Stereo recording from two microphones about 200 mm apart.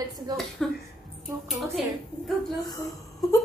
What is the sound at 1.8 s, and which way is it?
Speech, centre (ahead or behind).